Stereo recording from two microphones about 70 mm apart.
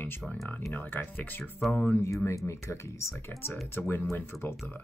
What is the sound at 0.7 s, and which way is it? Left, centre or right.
Speech, left.